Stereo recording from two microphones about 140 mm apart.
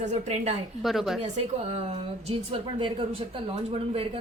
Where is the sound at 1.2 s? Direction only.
50° right (ahead or behind).